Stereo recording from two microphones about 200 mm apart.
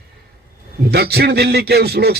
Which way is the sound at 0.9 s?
50° right (ahead or behind).